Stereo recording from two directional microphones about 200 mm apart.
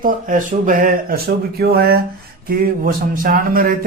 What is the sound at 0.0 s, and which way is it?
A man's voice, 40° right (ahead or behind).